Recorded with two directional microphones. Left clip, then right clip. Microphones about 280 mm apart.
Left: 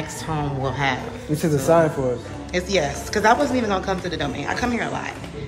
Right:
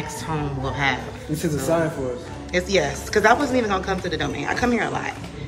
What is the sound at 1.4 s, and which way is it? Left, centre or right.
Speech, left.